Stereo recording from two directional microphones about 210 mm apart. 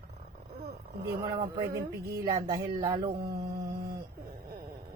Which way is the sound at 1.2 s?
20° right (ahead or behind).